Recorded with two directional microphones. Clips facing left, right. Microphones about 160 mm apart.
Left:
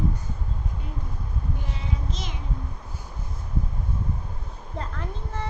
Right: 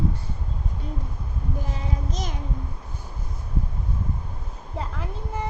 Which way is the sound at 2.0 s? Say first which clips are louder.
Right 3 dB; 45° right (ahead or behind).